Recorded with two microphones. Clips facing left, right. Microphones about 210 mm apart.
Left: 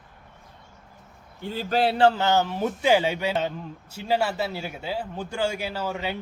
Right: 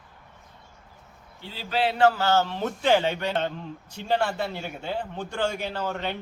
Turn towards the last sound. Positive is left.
turn(degrees=5)  # may be behind; listen again after turning